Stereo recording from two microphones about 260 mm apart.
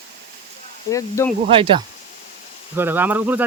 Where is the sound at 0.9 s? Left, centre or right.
Centre.